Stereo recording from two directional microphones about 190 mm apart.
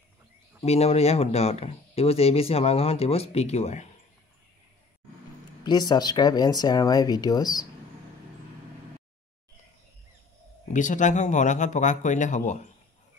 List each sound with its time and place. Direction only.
0.7 s speech: 35° left (ahead or behind)
5.6 s speech: 20° left (ahead or behind)
10.7 s speech: 40° left (ahead or behind)